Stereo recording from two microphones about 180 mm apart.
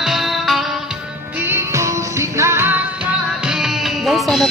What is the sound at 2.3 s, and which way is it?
Music, 15° right (ahead or behind).